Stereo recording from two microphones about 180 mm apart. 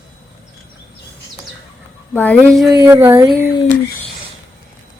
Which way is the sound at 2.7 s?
25° right (ahead or behind).